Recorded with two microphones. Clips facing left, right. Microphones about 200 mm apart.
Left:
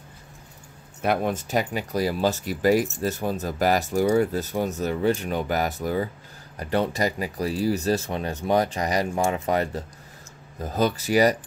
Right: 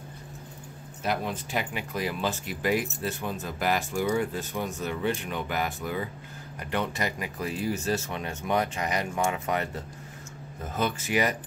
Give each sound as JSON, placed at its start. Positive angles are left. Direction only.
{"t": 1.0, "sound": "speech", "side_deg": 55}